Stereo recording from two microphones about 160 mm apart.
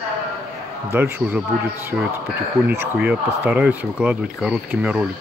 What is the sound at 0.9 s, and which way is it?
Speech, 10° right (ahead or behind).